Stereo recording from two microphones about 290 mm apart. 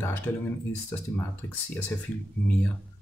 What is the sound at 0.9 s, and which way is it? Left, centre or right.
Speech, centre.